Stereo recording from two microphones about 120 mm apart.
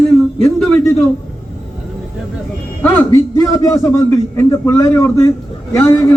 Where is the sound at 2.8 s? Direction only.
15° left (ahead or behind).